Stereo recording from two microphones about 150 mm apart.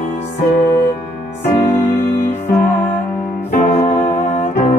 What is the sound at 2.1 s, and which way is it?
Music, 55° left (ahead or behind).